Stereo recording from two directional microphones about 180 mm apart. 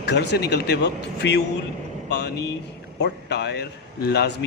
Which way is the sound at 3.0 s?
70° left (ahead or behind).